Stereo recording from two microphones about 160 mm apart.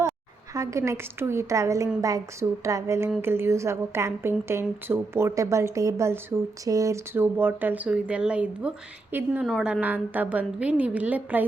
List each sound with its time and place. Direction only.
0.5 s a woman's voice: 20° right (ahead or behind)
9.5 s a woman's voice: centre (ahead or behind)
9.8 s speech: 10° right (ahead or behind)